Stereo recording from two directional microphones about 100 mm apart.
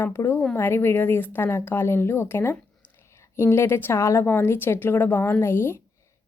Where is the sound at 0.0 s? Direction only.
30° left (ahead or behind).